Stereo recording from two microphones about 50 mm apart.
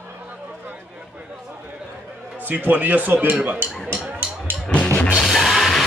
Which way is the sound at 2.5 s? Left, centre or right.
Right.